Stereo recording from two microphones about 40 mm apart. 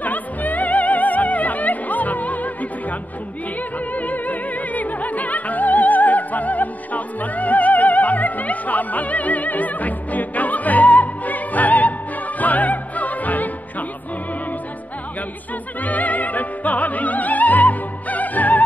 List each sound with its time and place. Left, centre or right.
0.0 s music: left
15.8 s opera: left